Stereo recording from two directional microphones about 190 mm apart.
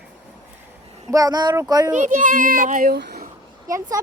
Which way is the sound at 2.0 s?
45° right (ahead or behind).